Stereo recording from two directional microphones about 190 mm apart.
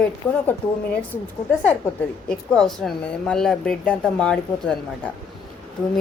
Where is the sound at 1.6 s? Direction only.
5° left (ahead or behind).